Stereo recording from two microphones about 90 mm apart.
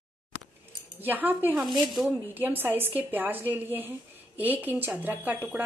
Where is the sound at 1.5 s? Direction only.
Centre (ahead or behind).